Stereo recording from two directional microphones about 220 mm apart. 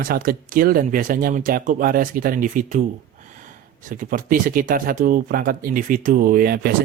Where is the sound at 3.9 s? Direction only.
40° right (ahead or behind).